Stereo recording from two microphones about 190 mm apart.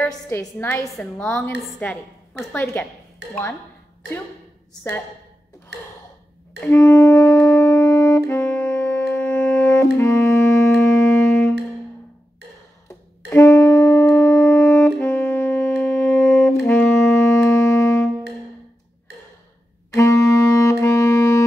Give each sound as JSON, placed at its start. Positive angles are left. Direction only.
{"t": 0.3, "sound": "a woman's voice", "side_deg": 15}
{"t": 3.2, "sound": "speech", "side_deg": -60}
{"t": 5.7, "sound": "a sound", "side_deg": -60}
{"t": 6.6, "sound": "saxophone", "side_deg": 15}
{"t": 9.9, "sound": "music", "side_deg": 15}
{"t": 13.3, "sound": "saxophone", "side_deg": 15}
{"t": 19.9, "sound": "wind instrument", "side_deg": 15}